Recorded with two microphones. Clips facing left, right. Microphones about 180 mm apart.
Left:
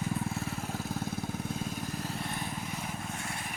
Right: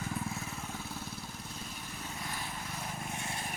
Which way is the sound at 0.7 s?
50° left (ahead or behind).